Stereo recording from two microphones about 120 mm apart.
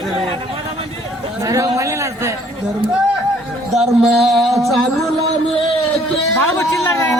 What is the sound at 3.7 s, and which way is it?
Speech, centre (ahead or behind).